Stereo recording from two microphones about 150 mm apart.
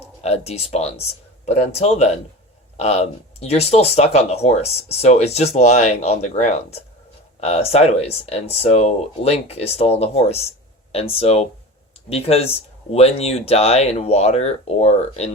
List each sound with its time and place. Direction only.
0.2 s speech: 45° left (ahead or behind)